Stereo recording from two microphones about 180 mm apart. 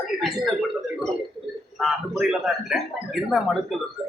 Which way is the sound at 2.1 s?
Centre (ahead or behind).